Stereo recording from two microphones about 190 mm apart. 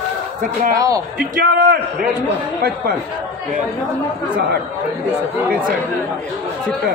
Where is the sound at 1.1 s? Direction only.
50° right (ahead or behind).